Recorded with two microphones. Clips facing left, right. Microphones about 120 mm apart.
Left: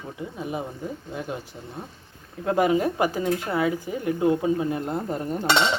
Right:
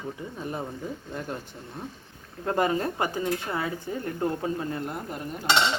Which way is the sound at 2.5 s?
10° left (ahead or behind).